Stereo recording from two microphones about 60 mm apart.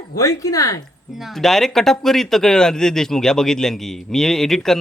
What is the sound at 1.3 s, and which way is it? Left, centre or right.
Speech, centre.